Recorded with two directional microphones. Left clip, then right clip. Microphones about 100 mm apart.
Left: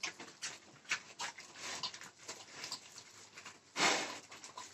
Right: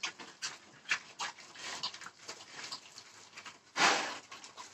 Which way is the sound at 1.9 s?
30° right (ahead or behind).